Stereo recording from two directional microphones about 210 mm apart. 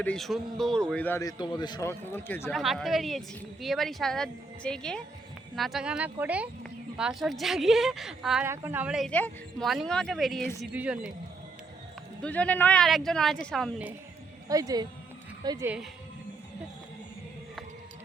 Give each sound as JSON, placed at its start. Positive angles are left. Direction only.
{"t": 0.0, "sound": "a man's voice", "side_deg": 5}
{"t": 2.6, "sound": "speech", "side_deg": 0}
{"t": 12.2, "sound": "speech", "side_deg": 5}
{"t": 14.4, "sound": "speech", "side_deg": -15}